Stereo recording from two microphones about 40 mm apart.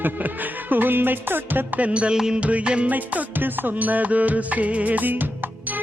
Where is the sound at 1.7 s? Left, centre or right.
Right.